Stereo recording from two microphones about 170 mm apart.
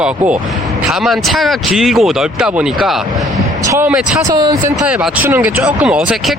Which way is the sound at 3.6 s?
15° right (ahead or behind).